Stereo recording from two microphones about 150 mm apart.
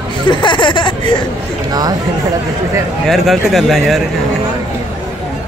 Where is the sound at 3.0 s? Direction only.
Centre (ahead or behind).